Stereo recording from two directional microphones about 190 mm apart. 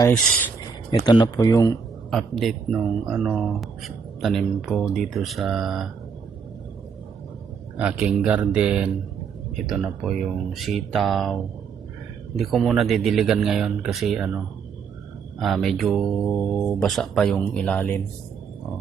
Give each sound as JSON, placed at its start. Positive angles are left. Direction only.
{"t": 0.9, "sound": "speech", "side_deg": 25}
{"t": 2.0, "sound": "speech", "side_deg": 0}
{"t": 7.8, "sound": "speech", "side_deg": -5}
{"t": 12.4, "sound": "speech", "side_deg": 0}
{"t": 15.4, "sound": "speech", "side_deg": 0}